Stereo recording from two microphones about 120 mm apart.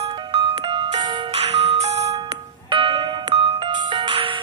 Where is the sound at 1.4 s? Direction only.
60° right (ahead or behind).